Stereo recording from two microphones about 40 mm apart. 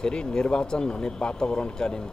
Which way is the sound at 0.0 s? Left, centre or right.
Left.